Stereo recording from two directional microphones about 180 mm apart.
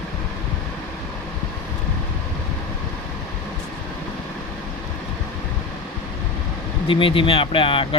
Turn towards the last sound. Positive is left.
turn(degrees=30)  # may be behind; listen again after turning